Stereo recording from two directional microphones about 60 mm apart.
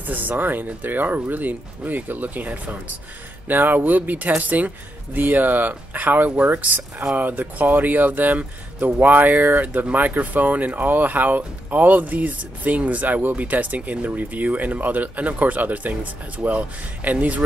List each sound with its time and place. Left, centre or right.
0.0 s speech: right